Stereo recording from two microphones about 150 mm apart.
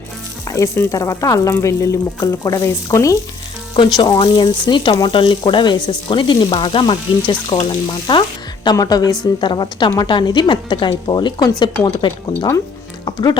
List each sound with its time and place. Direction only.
0.4 s frying: 20° left (ahead or behind)
3.8 s speech: 30° left (ahead or behind)
8.6 s frying: 25° left (ahead or behind)
9.2 s speech: 30° left (ahead or behind)
13.1 s music: 30° left (ahead or behind)